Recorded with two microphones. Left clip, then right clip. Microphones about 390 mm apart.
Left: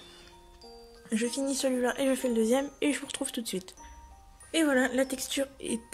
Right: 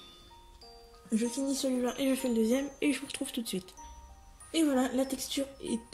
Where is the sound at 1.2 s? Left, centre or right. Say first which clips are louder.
Left 2 dB; left.